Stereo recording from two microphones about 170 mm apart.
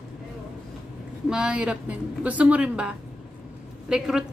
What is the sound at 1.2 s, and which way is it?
A woman's voice, 5° right (ahead or behind).